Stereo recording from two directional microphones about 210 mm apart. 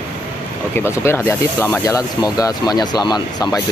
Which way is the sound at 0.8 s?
10° left (ahead or behind).